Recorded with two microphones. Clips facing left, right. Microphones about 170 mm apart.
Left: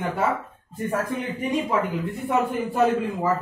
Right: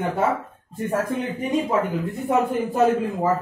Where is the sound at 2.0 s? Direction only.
40° right (ahead or behind).